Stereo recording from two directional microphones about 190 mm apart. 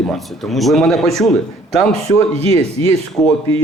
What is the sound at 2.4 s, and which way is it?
Speech, 30° right (ahead or behind).